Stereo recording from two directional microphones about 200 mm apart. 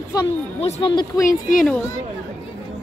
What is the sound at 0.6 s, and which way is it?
Speech, 25° left (ahead or behind).